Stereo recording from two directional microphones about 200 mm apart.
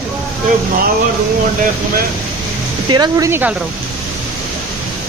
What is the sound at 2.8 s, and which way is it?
Speech, 20° right (ahead or behind).